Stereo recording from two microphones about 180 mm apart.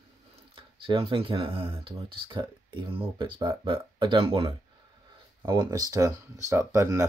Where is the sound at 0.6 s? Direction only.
30° right (ahead or behind).